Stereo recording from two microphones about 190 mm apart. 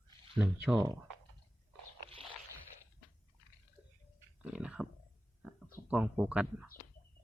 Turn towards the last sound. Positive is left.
turn(degrees=-5)  # may be behind; listen again after turning